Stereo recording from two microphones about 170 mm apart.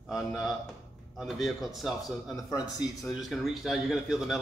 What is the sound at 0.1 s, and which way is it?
A man's voice, centre (ahead or behind).